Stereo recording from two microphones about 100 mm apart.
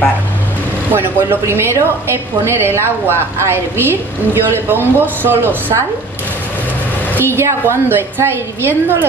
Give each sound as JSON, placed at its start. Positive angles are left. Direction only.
{"t": 0.9, "sound": "a woman's voice", "side_deg": -25}
{"t": 7.2, "sound": "a woman's voice", "side_deg": -25}